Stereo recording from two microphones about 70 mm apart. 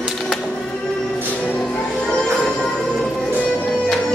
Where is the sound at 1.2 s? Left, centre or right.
Left.